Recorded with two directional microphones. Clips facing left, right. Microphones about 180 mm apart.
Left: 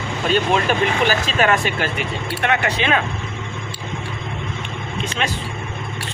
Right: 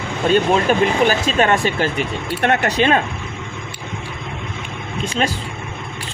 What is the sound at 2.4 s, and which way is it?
Speech, 40° right (ahead or behind).